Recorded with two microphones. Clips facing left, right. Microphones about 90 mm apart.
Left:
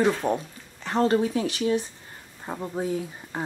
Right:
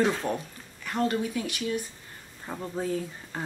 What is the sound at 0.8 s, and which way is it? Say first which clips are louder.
Speech: left 6 dB; 30° left (ahead or behind).